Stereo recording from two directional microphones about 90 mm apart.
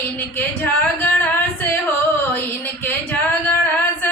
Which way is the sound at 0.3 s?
20° left (ahead or behind).